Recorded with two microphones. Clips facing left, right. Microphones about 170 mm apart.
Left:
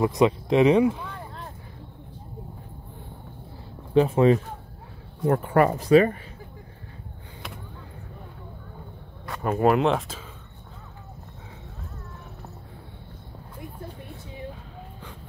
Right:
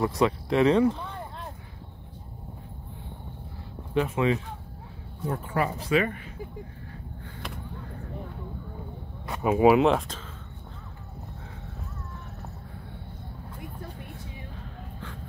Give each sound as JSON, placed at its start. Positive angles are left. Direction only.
{"t": 0.0, "sound": "speech", "side_deg": 15}
{"t": 3.9, "sound": "speech", "side_deg": 35}
{"t": 5.2, "sound": "speech", "side_deg": 65}
{"t": 5.9, "sound": "speech", "side_deg": 40}
{"t": 9.4, "sound": "speech", "side_deg": -5}